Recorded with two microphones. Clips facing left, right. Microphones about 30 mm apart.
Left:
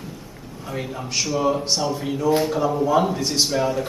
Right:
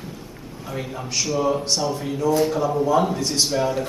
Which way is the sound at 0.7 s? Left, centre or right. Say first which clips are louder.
Left 1 dB; centre.